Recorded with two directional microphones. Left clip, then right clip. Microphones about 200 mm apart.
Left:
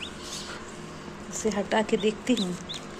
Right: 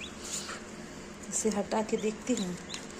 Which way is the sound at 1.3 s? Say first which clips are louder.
Left 2 dB; 25° right (ahead or behind).